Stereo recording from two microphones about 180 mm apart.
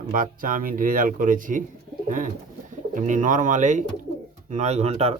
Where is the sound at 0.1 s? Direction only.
50° right (ahead or behind).